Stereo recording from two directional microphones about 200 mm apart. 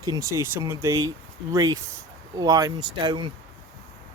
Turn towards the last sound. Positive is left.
turn(degrees=-25)  # may be behind; listen again after turning